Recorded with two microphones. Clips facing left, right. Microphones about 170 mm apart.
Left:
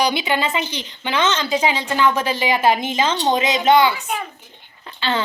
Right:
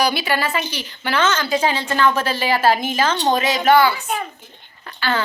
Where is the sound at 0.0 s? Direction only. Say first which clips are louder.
Even; 20° left (ahead or behind).